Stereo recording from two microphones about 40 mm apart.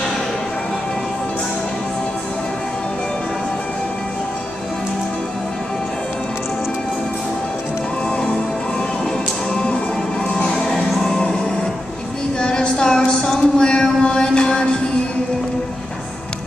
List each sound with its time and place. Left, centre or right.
9.5 s music: left
12.4 s a sound: left
13.2 s music: centre